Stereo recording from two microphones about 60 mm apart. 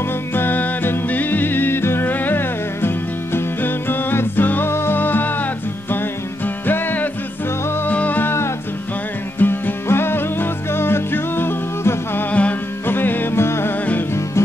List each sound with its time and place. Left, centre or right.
0.3 s music: left
9.4 s music: left
12.3 s music: left
12.8 s music: left